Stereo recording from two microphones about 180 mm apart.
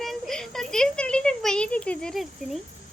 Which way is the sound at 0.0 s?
Centre (ahead or behind).